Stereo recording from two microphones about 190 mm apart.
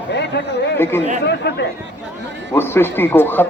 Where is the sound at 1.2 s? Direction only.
60° left (ahead or behind).